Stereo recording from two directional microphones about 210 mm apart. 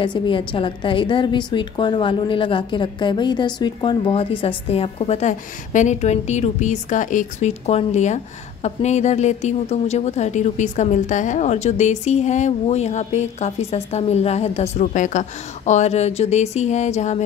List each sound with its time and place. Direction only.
0.0 s a woman's voice: 25° left (ahead or behind)